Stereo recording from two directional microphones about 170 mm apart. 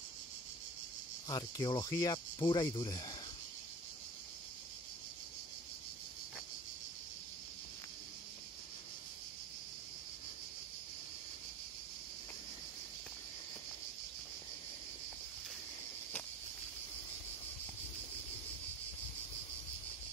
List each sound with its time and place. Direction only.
1.3 s speech: 25° left (ahead or behind)